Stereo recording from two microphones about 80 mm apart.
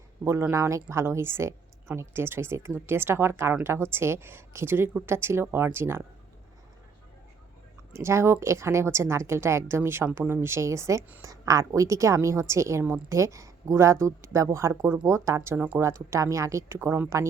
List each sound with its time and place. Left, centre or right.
0.3 s speech: right
7.9 s speech: right
15.5 s speech: centre
15.8 s speech: right
16.7 s speech: right